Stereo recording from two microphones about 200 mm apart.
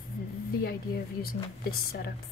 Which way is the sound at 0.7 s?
50° left (ahead or behind).